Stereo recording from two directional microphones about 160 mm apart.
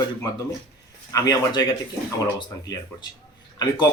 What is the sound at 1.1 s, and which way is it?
Speech, 25° left (ahead or behind).